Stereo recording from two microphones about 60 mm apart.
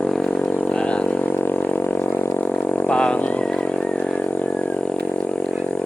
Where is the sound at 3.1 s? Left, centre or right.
Left.